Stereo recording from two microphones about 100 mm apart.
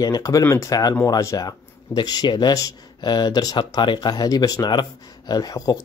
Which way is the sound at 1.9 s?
45° left (ahead or behind).